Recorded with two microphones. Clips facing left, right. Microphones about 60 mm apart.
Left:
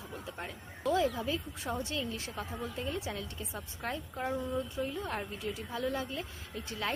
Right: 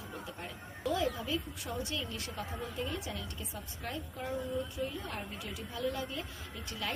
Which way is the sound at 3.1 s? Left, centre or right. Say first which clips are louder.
Left 2 dB; left.